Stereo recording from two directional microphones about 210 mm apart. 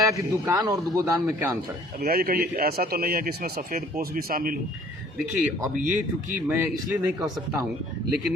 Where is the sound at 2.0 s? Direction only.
45° right (ahead or behind).